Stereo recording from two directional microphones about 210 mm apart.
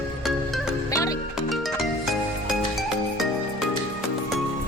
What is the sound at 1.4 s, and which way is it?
Music, centre (ahead or behind).